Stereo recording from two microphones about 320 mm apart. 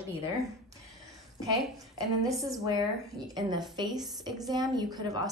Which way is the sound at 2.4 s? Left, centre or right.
Centre.